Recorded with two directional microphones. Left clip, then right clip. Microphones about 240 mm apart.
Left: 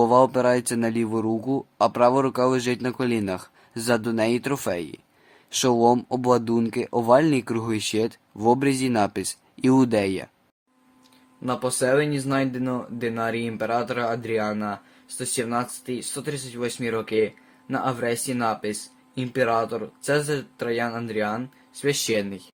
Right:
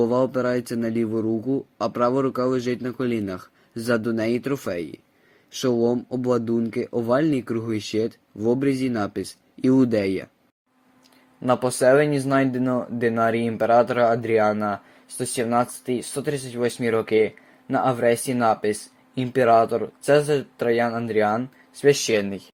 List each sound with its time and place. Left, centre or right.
0.0 s speech: centre
11.4 s speech: centre